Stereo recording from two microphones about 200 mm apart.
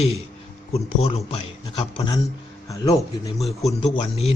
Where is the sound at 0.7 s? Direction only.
30° left (ahead or behind).